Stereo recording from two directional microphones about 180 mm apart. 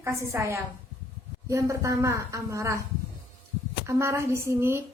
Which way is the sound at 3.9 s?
15° right (ahead or behind).